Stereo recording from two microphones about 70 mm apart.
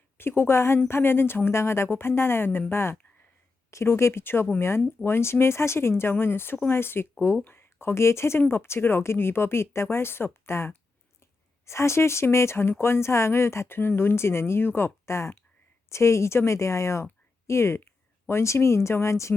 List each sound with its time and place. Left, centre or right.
0.2 s speech: left